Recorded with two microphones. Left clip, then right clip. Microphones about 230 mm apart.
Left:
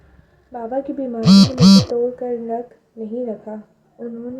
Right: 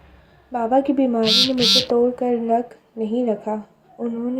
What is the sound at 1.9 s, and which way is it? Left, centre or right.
Speech, right.